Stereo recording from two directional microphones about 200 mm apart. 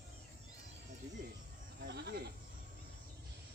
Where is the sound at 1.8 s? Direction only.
55° right (ahead or behind).